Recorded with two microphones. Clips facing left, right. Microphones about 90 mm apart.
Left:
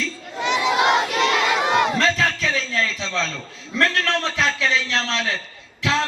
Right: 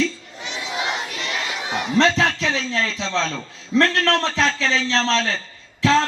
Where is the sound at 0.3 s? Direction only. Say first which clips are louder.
Left 13 dB; 70° left (ahead or behind); by 2.0 s 90° left.